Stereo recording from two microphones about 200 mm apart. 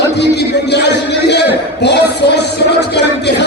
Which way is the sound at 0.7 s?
55° left (ahead or behind).